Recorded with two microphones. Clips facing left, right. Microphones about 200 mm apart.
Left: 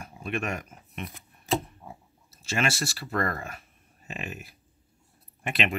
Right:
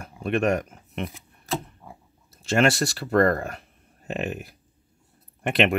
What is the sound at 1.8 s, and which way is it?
Pig, 15° left (ahead or behind).